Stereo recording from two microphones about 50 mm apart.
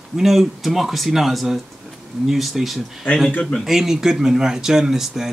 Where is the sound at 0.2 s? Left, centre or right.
Centre.